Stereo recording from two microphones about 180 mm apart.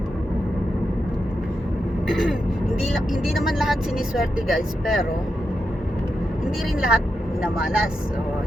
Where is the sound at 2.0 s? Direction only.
Centre (ahead or behind).